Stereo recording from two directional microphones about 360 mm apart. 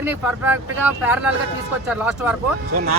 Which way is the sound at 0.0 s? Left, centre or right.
Centre.